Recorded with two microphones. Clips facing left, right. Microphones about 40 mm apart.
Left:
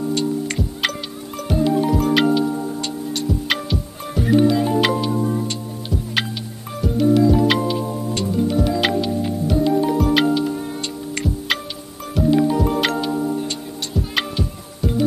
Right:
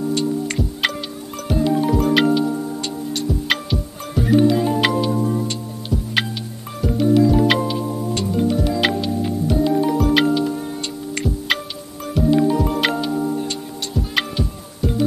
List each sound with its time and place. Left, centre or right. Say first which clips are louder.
0.1 s music: even; centre